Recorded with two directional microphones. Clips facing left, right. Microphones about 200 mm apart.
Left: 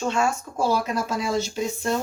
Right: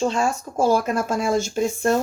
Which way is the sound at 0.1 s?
40° right (ahead or behind).